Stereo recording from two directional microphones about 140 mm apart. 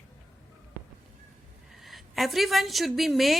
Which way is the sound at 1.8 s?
Centre (ahead or behind).